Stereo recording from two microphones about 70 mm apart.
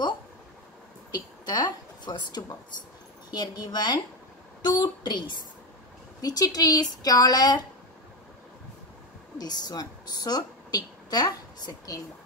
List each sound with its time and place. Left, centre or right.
1.4 s a woman's voice: left
6.2 s a woman's voice: left
9.4 s a woman's voice: left